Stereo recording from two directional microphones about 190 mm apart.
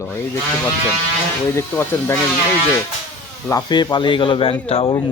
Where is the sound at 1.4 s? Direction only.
15° left (ahead or behind).